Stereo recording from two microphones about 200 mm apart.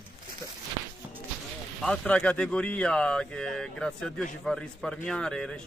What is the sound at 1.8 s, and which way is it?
Speech, 5° left (ahead or behind).